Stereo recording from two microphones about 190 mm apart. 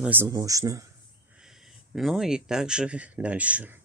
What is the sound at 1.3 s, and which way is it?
Speech, centre (ahead or behind).